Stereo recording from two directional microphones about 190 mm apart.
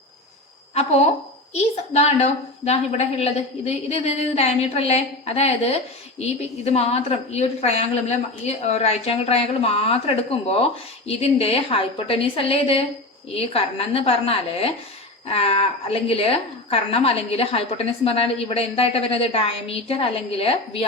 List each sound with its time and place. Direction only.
1.5 s a woman's voice: 35° left (ahead or behind)